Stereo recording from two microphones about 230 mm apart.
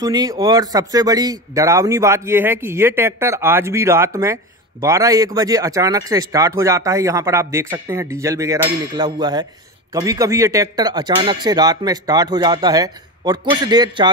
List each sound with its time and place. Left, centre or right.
0.0 s speech: centre